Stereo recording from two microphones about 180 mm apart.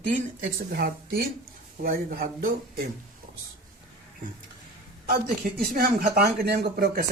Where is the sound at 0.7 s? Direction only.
55° right (ahead or behind).